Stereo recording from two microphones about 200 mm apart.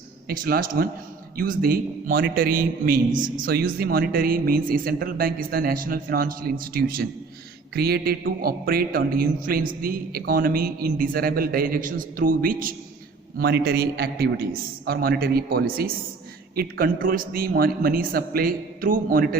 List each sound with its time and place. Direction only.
0.3 s a man's voice: 50° right (ahead or behind)